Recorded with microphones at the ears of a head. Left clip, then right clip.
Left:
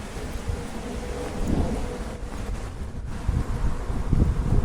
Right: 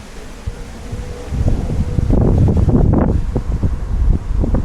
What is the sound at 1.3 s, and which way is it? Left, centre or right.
Wind, right.